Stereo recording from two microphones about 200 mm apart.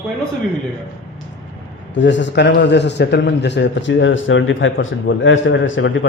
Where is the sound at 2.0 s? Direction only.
65° left (ahead or behind).